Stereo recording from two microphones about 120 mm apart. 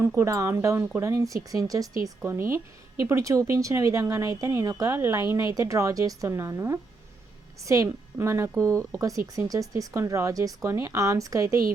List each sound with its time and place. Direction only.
0.2 s speech: 25° right (ahead or behind)